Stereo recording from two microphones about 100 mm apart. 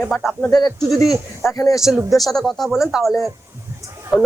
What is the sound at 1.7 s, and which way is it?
Speech, 5° right (ahead or behind).